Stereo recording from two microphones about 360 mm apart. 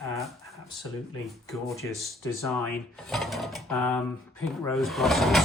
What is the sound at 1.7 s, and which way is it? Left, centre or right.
Speech, centre.